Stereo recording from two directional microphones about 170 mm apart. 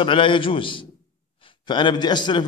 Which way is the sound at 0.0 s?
30° left (ahead or behind).